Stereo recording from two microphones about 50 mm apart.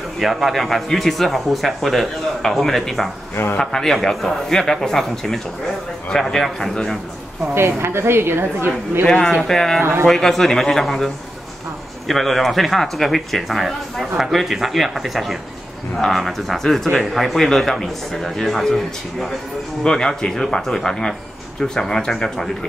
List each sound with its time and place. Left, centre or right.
0.2 s a man's voice: centre
7.5 s a woman's voice: right
9.0 s a man's voice: centre
9.8 s speech: right
10.0 s a man's voice: centre
12.1 s speech: centre
19.8 s a man's voice: centre